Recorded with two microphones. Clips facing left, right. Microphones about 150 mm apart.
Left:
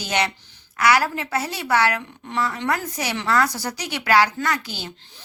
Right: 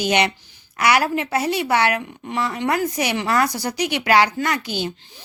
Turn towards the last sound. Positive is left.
turn(degrees=-20)  # may be behind; listen again after turning